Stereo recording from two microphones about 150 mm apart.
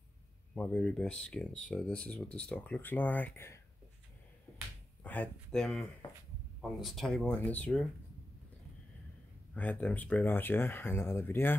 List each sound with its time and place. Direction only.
0.6 s speech: 5° left (ahead or behind)
4.5 s a sound: 20° left (ahead or behind)
5.0 s speech: 10° left (ahead or behind)
9.5 s speech: 10° left (ahead or behind)